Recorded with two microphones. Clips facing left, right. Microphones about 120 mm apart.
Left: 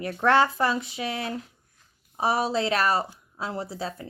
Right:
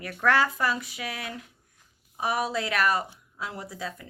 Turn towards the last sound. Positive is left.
turn(degrees=30)  # may be behind; listen again after turning